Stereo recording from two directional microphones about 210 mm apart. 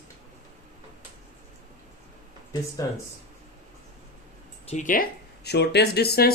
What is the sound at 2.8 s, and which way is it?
Speech, 15° left (ahead or behind).